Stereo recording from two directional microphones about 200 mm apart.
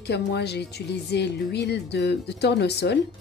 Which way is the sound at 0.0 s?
55° left (ahead or behind).